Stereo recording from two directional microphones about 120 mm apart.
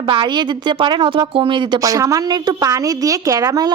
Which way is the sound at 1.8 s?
30° right (ahead or behind).